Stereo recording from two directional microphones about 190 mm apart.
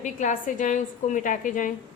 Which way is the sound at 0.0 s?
40° left (ahead or behind).